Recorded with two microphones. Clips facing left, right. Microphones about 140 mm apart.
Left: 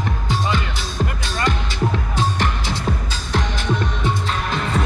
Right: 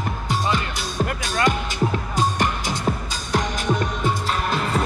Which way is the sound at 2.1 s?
45° right (ahead or behind).